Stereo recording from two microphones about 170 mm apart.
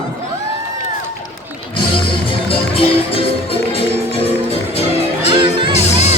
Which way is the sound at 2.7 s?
35° left (ahead or behind).